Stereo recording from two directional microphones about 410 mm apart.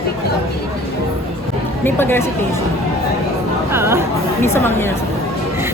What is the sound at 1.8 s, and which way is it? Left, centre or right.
Speech, centre.